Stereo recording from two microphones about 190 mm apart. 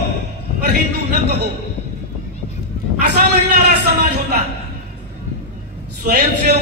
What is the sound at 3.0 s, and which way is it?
A man's voice, 60° right (ahead or behind).